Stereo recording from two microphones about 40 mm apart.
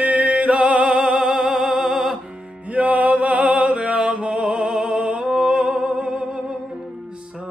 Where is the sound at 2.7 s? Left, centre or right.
Right.